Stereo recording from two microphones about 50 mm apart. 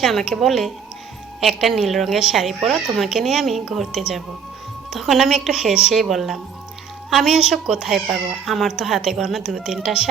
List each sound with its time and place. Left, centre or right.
0.0 s a woman's voice: centre